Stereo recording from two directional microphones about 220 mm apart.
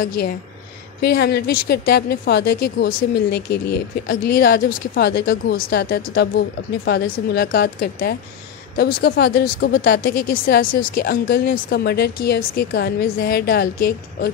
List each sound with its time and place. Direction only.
1.0 s speech: 45° left (ahead or behind)